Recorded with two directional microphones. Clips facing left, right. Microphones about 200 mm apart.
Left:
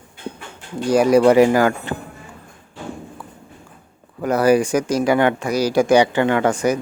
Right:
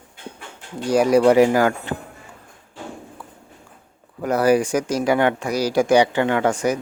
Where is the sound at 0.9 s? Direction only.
90° left.